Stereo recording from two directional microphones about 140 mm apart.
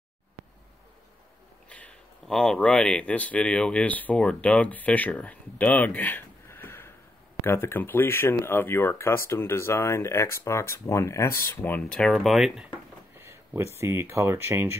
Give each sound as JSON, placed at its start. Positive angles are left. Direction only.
{"t": 1.7, "sound": "speech", "side_deg": 10}
{"t": 13.1, "sound": "a sound", "side_deg": -15}
{"t": 13.7, "sound": "speech", "side_deg": -20}